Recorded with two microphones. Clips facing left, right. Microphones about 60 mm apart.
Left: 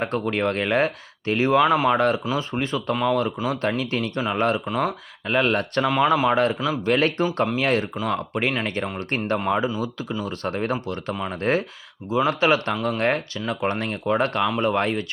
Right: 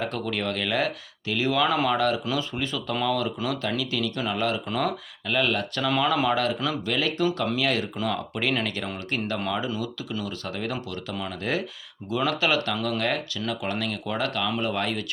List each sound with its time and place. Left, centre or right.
0.0 s speech: left
1.6 s speech: left
2.0 s speech: left
2.9 s speech: left
4.7 s speech: centre
5.3 s speech: left
5.8 s speech: left
12.7 s speech: centre
13.0 s speech: left